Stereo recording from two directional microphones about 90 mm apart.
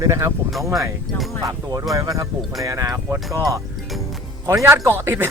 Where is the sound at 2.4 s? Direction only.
Centre (ahead or behind).